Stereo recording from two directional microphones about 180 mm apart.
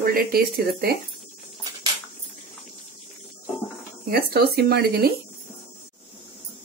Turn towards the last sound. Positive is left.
turn(degrees=-60)  # may be behind; listen again after turning